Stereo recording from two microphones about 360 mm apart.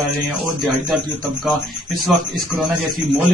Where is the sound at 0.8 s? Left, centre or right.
Centre.